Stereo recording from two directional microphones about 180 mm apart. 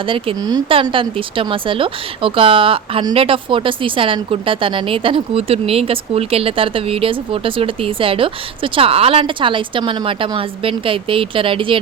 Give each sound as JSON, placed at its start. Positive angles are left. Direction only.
{"t": 0.0, "sound": "speech", "side_deg": -30}